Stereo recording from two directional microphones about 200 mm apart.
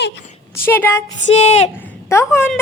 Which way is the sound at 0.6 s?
10° left (ahead or behind).